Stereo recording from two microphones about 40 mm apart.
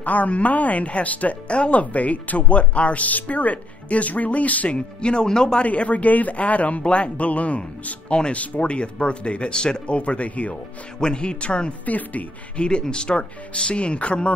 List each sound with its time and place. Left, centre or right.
0.0 s speech: left
4.7 s speech: left
5.6 s speech: left
11.0 s speech: left
11.8 s speech: left
12.5 s speech: left